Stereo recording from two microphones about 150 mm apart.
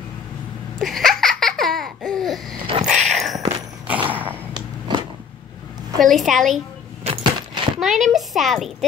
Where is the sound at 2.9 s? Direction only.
Centre (ahead or behind).